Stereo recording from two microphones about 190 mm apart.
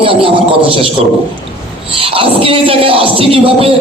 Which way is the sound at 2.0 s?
30° right (ahead or behind).